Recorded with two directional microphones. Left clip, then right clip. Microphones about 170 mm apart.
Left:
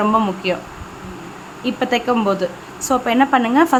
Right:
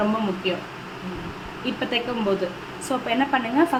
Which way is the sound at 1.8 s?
55° left (ahead or behind).